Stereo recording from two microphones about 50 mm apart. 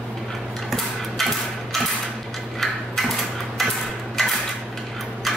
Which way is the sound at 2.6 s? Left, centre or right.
Centre.